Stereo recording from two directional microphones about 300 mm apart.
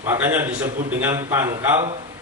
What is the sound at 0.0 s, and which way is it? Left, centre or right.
A man's voice, centre.